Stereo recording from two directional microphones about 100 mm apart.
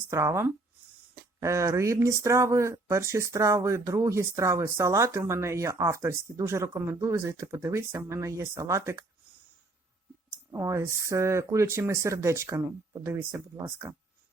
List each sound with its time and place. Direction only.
0.1 s speech: 30° right (ahead or behind)
10.5 s speech: 30° right (ahead or behind)